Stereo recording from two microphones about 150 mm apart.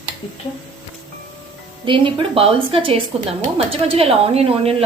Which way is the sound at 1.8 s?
35° right (ahead or behind).